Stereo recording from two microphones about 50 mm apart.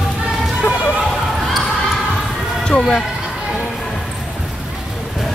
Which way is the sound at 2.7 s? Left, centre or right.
Left.